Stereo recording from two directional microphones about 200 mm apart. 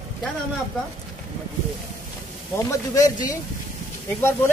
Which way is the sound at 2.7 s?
15° left (ahead or behind).